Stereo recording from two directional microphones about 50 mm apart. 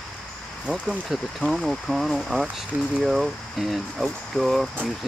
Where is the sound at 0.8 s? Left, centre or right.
Centre.